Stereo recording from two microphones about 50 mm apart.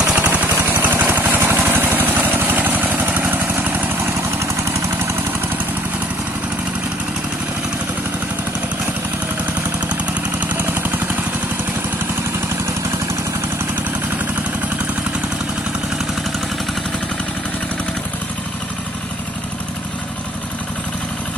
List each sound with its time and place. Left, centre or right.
0.0 s vehicle: right
10.6 s vehicle: right